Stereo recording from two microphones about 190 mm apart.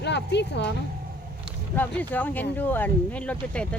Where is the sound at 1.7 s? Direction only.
10° left (ahead or behind).